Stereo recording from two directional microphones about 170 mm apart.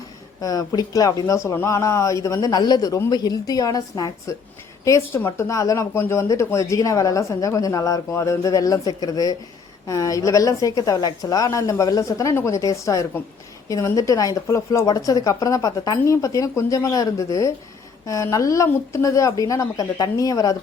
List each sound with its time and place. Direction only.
0.4 s speech: 20° left (ahead or behind)